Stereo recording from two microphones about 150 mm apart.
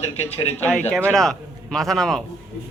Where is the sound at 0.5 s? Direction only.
10° left (ahead or behind).